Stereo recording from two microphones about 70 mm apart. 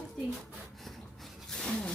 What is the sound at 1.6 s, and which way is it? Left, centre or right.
Speech, centre.